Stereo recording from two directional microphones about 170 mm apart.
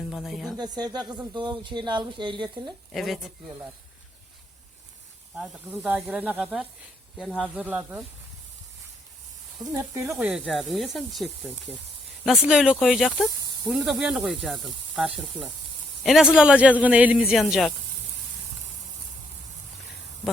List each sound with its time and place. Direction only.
0.1 s speech: centre (ahead or behind)
0.6 s speech: 25° right (ahead or behind)
2.9 s speech: centre (ahead or behind)
5.3 s speech: 5° right (ahead or behind)
9.6 s speech: 20° right (ahead or behind)
10.1 s speech: 5° right (ahead or behind)